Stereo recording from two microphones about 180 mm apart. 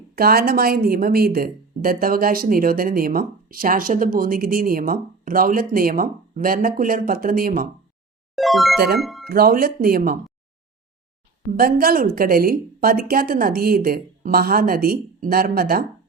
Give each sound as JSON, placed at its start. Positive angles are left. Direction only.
{"t": 0.2, "sound": "speech", "side_deg": -55}
{"t": 8.4, "sound": "speech", "side_deg": 0}
{"t": 9.3, "sound": "speech", "side_deg": -55}
{"t": 11.5, "sound": "speech", "side_deg": -55}